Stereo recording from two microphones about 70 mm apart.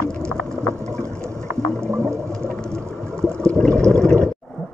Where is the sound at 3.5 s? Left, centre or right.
Centre.